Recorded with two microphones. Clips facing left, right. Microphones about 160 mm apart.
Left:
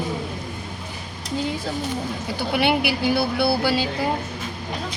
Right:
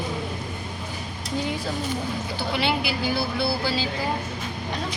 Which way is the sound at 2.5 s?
65° left (ahead or behind).